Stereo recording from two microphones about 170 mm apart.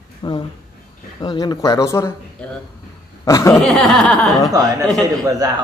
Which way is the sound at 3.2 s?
20° left (ahead or behind).